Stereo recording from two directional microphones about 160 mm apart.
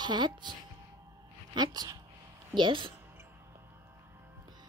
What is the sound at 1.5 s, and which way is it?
A woman's voice, 25° right (ahead or behind).